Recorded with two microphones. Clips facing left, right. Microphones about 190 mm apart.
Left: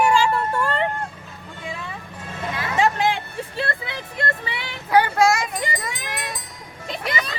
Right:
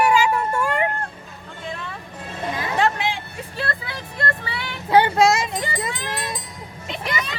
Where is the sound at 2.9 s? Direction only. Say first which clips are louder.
Left 4 dB; 45° left (ahead or behind).